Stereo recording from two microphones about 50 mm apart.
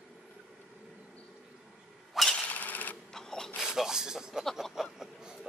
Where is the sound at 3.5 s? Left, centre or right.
Centre.